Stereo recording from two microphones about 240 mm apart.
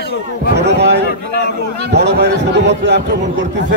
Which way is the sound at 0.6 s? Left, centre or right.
Right.